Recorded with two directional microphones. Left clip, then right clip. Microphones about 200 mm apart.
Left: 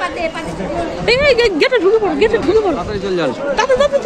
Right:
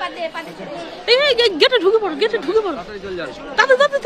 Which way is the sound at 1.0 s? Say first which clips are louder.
Left 2 dB; 10° right (ahead or behind).